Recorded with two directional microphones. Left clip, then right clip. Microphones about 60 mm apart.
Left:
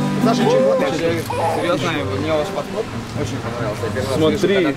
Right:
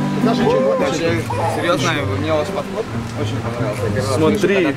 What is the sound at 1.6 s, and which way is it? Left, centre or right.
Speech, right.